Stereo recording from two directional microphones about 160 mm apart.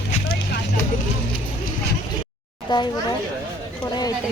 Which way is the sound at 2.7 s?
30° left (ahead or behind).